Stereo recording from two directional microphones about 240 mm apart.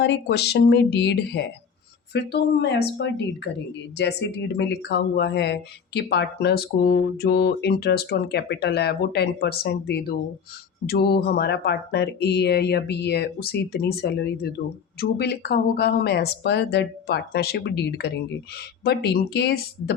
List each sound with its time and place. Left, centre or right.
0.0 s speech: left